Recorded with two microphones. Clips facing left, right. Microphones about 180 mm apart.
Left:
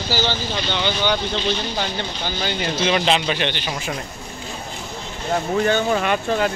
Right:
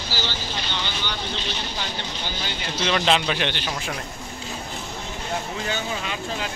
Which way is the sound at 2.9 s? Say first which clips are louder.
Left 1 dB; centre (ahead or behind).